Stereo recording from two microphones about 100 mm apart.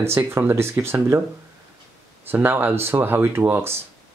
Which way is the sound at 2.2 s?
20° right (ahead or behind).